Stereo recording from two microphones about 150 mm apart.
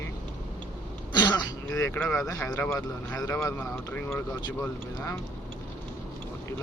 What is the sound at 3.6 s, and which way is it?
Speech, 10° left (ahead or behind).